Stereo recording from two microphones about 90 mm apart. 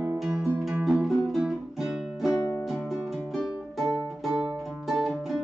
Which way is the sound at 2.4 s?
25° left (ahead or behind).